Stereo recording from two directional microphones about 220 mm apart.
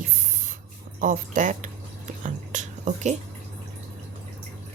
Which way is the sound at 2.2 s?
35° right (ahead or behind).